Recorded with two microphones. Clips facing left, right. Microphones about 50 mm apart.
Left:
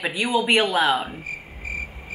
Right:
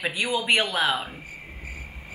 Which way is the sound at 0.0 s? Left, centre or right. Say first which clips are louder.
Left 4 dB; centre.